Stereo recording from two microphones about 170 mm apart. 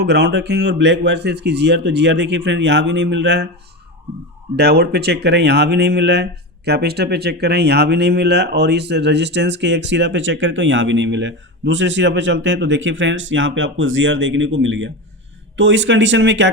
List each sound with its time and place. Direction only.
0.0 s speech: 80° right
4.5 s speech: 70° right (ahead or behind); by 16.5 s 90° right